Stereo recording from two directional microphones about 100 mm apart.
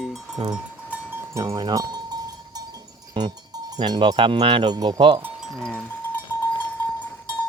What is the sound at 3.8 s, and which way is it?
Speech, 50° right (ahead or behind).